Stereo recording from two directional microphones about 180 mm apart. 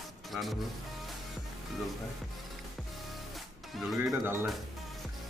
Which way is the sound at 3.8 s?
Centre (ahead or behind).